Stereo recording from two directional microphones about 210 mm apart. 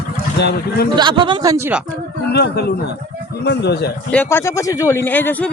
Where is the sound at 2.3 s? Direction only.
50° left (ahead or behind).